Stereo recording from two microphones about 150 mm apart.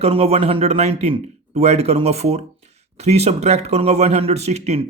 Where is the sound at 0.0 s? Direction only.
40° right (ahead or behind).